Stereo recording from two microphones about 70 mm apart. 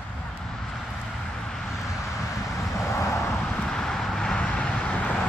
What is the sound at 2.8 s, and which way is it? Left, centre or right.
Vehicle, left.